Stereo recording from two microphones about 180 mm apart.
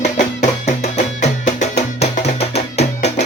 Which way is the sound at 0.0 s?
40° left (ahead or behind).